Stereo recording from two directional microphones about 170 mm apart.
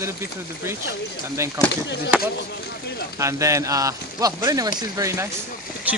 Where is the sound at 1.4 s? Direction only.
15° right (ahead or behind).